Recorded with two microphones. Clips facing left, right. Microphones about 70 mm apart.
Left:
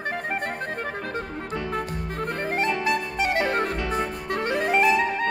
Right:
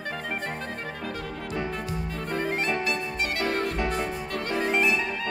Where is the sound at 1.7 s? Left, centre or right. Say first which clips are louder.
Left 3 dB; left.